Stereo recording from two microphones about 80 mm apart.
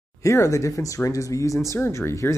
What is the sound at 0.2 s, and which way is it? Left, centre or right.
Speech, left.